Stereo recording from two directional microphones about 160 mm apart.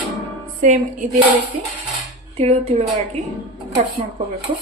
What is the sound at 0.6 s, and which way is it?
Music, 55° right (ahead or behind).